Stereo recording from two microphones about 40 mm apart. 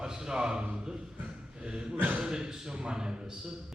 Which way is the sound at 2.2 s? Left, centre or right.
Centre.